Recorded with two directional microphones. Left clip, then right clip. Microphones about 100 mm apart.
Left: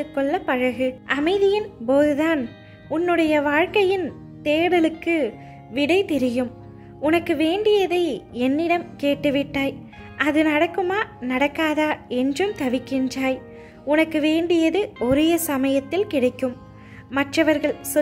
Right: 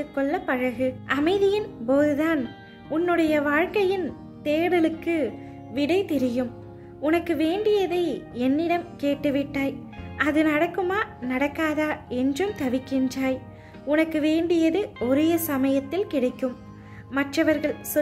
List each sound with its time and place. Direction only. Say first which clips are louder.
0.0 s a woman's voice: left 3 dB; 35° left (ahead or behind)